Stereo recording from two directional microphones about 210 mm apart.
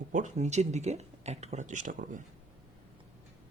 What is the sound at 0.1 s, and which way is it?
Speech, 35° right (ahead or behind).